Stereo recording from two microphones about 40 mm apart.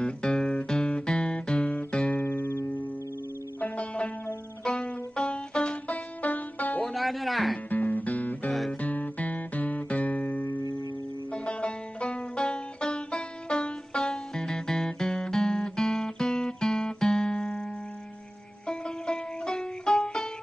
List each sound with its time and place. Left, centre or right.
0.0 s music: centre
0.7 s guitar: left
2.1 s music: left
3.6 s music: left
5.1 s music: left
5.9 s music: left
6.8 s music: centre
7.7 s music: left
8.8 s guitar: left
11.3 s banjo: left
14.0 s guitar: centre
18.7 s music: centre